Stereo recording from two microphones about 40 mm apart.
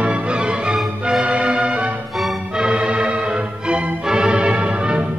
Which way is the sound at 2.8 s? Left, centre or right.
Right.